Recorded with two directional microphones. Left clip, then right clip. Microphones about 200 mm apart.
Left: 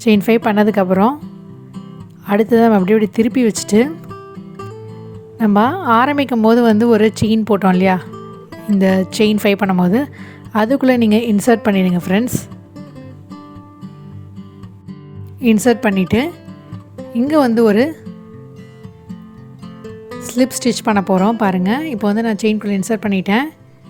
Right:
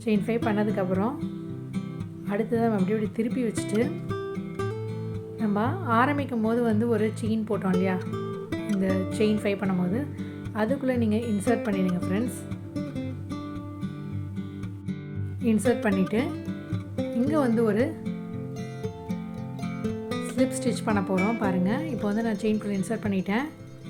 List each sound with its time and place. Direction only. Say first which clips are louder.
0.0 s a woman's voice: left 13 dB; 50° left (ahead or behind)
2.2 s a woman's voice: left 14 dB; 50° left (ahead or behind)
5.4 s a woman's voice: left 14 dB; 50° left (ahead or behind)
15.4 s a woman's voice: left 11 dB; 45° left (ahead or behind)
20.2 s a woman's voice: left 11 dB; 45° left (ahead or behind)